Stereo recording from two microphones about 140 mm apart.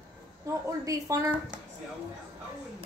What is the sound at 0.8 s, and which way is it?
Speech, 25° right (ahead or behind).